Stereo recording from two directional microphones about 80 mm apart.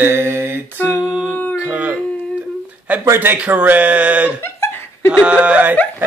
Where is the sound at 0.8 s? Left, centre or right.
Centre.